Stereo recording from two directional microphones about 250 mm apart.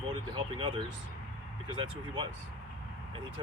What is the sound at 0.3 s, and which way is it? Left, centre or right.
Speech, centre.